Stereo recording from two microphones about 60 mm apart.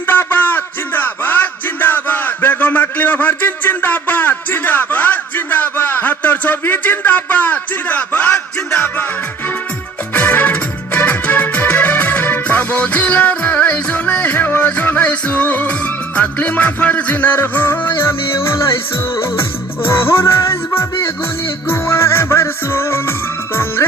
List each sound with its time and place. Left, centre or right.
0.1 s music: left
10.2 s music: left